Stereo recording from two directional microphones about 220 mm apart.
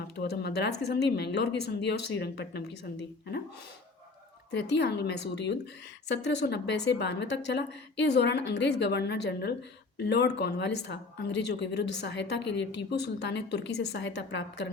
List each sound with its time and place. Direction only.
0.2 s a woman's voice: 50° left (ahead or behind)
4.5 s a woman's voice: 50° left (ahead or behind)